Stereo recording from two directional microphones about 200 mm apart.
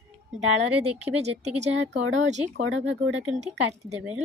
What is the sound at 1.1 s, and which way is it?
Speech, 30° right (ahead or behind).